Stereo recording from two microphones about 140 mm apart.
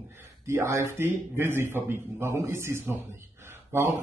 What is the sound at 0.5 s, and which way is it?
A man's voice, 20° right (ahead or behind).